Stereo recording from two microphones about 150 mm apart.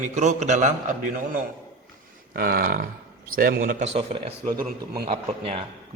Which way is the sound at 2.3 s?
80° right.